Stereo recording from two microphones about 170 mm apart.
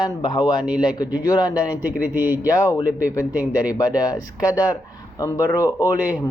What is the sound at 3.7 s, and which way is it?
Speech, 20° left (ahead or behind).